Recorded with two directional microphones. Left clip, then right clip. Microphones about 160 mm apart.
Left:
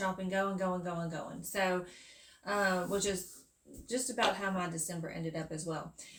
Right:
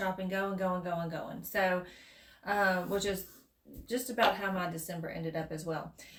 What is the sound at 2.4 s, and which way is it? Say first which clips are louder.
Speech: right 2 dB; 20° right (ahead or behind).